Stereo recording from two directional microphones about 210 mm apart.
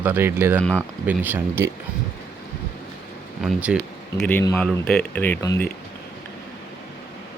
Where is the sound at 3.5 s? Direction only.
5° right (ahead or behind); by 5.7 s 15° left (ahead or behind).